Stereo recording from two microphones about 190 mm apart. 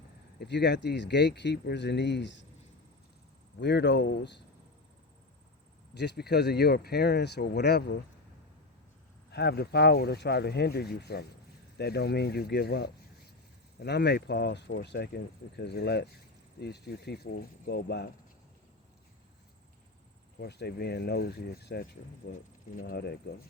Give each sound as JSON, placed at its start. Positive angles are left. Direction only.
{"t": 0.3, "sound": "speech", "side_deg": 65}
{"t": 3.6, "sound": "speech", "side_deg": 65}
{"t": 5.9, "sound": "speech", "side_deg": 60}
{"t": 9.3, "sound": "speech", "side_deg": 60}
{"t": 20.4, "sound": "speech", "side_deg": 60}